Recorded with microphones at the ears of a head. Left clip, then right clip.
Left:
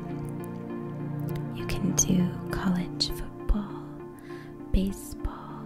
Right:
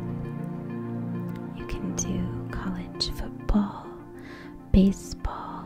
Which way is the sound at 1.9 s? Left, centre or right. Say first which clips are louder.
Left 8 dB; left.